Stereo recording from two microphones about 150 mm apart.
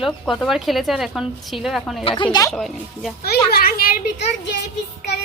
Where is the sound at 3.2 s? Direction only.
90° left.